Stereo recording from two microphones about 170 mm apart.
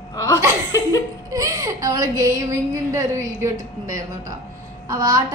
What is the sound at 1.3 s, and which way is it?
A woman's voice, 20° right (ahead or behind).